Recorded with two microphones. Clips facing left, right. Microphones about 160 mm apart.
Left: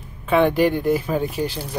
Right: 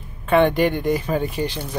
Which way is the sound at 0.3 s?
5° left (ahead or behind).